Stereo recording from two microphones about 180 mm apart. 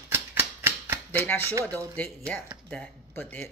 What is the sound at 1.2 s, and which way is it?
Speech, 10° left (ahead or behind).